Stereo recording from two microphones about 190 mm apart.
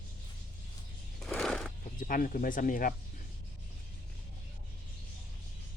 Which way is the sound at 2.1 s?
45° left (ahead or behind).